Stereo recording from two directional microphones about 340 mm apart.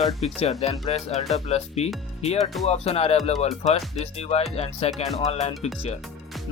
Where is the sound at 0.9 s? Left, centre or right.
Centre.